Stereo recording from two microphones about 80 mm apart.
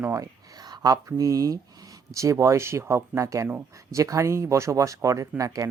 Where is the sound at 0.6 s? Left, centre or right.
Right.